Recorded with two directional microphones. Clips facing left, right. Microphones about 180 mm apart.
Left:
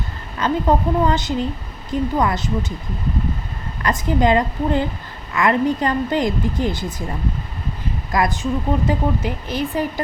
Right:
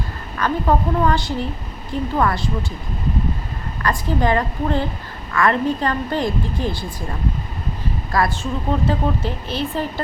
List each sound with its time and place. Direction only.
0.3 s a woman's voice: 20° left (ahead or behind)
3.8 s a woman's voice: 20° left (ahead or behind)
8.1 s a woman's voice: 20° left (ahead or behind)